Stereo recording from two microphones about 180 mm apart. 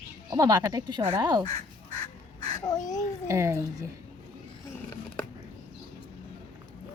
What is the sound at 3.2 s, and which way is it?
Speech, 15° right (ahead or behind).